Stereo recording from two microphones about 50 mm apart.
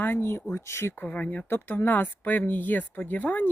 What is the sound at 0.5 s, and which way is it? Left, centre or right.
Speech, left.